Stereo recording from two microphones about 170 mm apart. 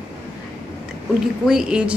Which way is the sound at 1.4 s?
5° right (ahead or behind).